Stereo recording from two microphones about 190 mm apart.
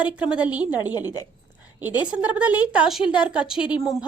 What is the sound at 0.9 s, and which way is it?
Speech, 20° left (ahead or behind).